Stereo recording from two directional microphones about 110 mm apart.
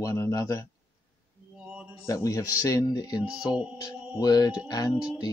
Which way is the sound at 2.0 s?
30° left (ahead or behind).